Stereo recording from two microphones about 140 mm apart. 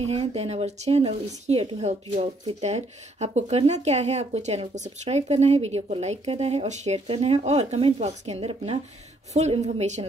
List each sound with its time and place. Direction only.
0.0 s speech: 50° right (ahead or behind)